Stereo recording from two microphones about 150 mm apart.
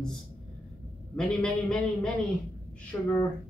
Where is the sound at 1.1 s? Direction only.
5° left (ahead or behind).